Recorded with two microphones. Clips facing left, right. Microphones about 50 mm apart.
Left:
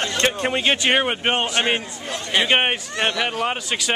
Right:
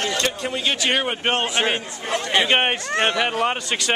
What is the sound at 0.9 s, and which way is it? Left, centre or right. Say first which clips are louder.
Speech: left 2 dB; centre.